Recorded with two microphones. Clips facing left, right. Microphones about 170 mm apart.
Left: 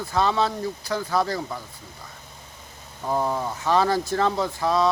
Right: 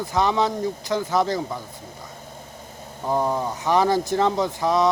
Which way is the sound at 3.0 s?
15° right (ahead or behind).